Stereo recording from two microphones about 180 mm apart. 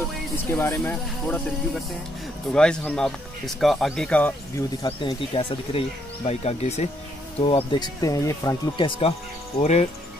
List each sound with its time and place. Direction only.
0.5 s speech: 15° left (ahead or behind)
2.5 s speech: 5° left (ahead or behind)
4.8 s speech: 30° left (ahead or behind)
8.0 s speech: 20° left (ahead or behind)
9.6 s speech: 40° left (ahead or behind)